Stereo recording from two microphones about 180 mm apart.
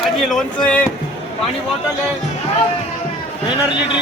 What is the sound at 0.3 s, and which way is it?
Speech, 5° left (ahead or behind).